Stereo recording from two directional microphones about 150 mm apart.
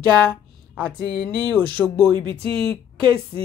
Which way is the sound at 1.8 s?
10° left (ahead or behind).